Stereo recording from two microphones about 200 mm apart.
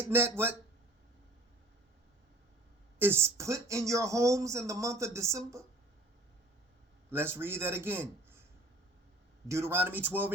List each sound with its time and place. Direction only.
0.1 s speech: 10° right (ahead or behind)
3.0 s speech: 10° right (ahead or behind)
7.1 s a man's voice: 10° right (ahead or behind)
9.5 s speech: 15° right (ahead or behind)